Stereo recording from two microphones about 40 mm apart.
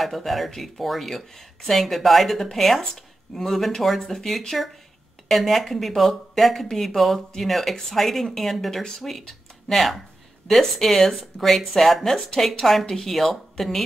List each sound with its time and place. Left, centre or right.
0.0 s speech: centre